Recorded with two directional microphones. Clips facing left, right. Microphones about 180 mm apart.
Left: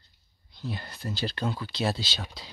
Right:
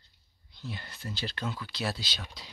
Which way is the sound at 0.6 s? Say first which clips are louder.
Left 5 dB; 40° left (ahead or behind).